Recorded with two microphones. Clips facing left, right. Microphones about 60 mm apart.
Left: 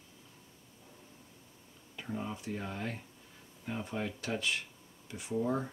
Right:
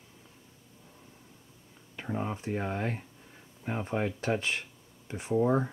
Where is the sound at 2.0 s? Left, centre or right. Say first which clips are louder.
Right 5 dB; right.